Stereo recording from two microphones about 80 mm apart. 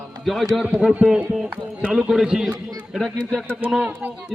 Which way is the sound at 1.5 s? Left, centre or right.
Centre.